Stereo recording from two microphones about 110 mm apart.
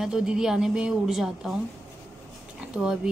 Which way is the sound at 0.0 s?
5° right (ahead or behind).